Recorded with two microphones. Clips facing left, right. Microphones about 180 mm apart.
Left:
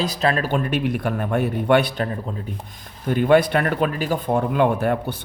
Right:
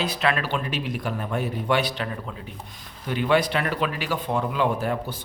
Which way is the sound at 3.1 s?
50° left (ahead or behind).